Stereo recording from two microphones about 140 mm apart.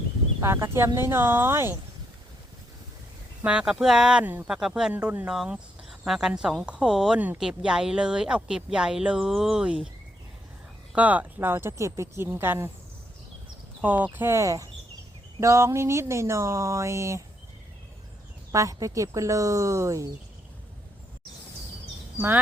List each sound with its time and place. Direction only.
0.4 s speech: 20° right (ahead or behind)
3.4 s speech: 5° right (ahead or behind)
10.9 s speech: 10° right (ahead or behind)
13.8 s speech: 10° right (ahead or behind)
18.5 s speech: 25° right (ahead or behind)